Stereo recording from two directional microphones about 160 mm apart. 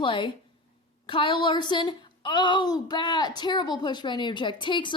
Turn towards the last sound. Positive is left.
turn(degrees=30)  # may be behind; listen again after turning